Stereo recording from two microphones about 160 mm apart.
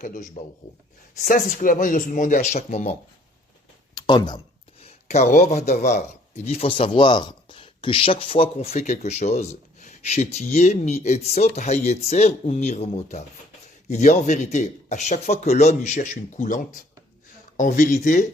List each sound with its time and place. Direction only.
0.0 s a man's voice: 50° left (ahead or behind)
3.9 s a sound: 25° left (ahead or behind)
4.8 s a man's voice: 45° left (ahead or behind)